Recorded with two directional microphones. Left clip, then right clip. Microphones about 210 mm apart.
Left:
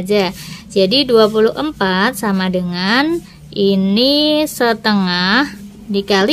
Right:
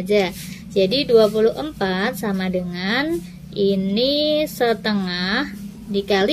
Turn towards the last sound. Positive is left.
turn(degrees=25)  # may be behind; listen again after turning